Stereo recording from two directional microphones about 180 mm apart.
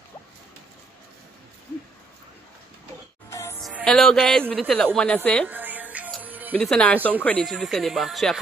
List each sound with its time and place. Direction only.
3.3 s music: 15° left (ahead or behind)
3.6 s a woman's voice: centre (ahead or behind)
5.5 s music: 10° right (ahead or behind)
6.5 s speech: 5° left (ahead or behind)